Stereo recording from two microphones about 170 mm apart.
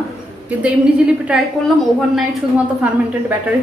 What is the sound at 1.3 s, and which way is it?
A woman's voice, 5° right (ahead or behind).